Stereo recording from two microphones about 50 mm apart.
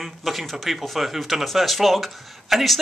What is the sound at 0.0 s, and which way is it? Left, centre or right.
Speech, centre.